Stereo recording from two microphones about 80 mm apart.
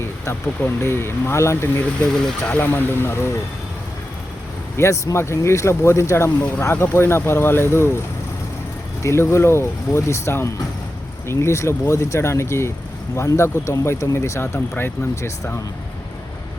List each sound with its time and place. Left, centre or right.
0.8 s speech: left
2.2 s speech: centre
2.6 s speech: left
4.8 s speech: left
9.0 s speech: left